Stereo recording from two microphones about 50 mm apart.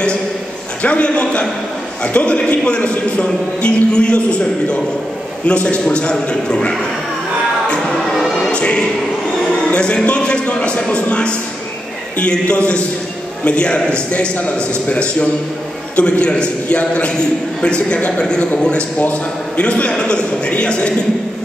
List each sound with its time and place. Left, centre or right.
0.8 s a man's voice: left
8.4 s choir: centre
9.7 s a man's voice: left